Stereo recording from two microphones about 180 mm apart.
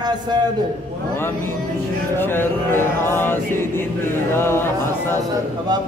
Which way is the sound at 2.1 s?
10° left (ahead or behind).